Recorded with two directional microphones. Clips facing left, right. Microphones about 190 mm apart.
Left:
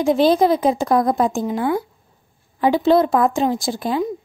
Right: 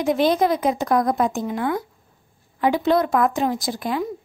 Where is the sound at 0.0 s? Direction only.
30° left (ahead or behind).